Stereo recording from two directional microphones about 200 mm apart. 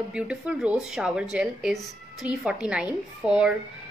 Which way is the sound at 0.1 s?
5° right (ahead or behind).